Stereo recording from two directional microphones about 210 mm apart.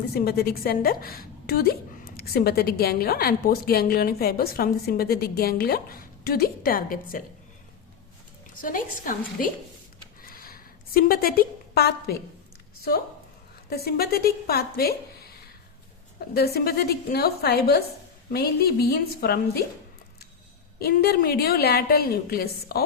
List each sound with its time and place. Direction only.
0.1 s a woman's voice: 50° left (ahead or behind)
8.6 s a woman's voice: 40° left (ahead or behind)
10.2 s a sound: 45° left (ahead or behind)
13.7 s a woman's voice: 50° left (ahead or behind)
16.3 s a woman's voice: 50° left (ahead or behind)
20.7 s a woman's voice: 50° left (ahead or behind)